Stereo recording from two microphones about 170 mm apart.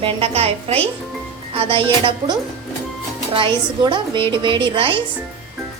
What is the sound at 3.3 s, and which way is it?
A woman's voice, 30° right (ahead or behind).